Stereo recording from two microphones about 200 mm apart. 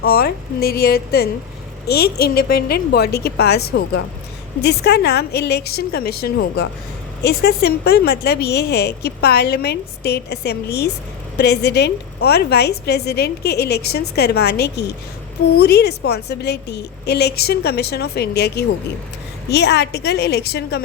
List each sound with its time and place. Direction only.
0.0 s a woman's voice: 50° left (ahead or behind)